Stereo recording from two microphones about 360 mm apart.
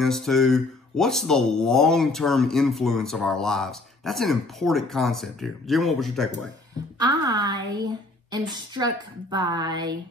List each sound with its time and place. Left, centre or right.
0.0 s speech: centre
7.0 s a woman's voice: centre